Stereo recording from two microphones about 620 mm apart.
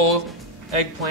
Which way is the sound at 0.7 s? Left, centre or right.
Right.